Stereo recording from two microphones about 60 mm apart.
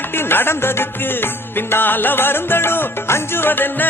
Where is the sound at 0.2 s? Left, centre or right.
Left.